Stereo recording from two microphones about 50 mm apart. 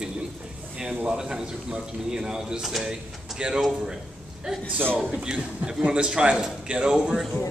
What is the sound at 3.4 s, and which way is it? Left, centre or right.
Speech, centre.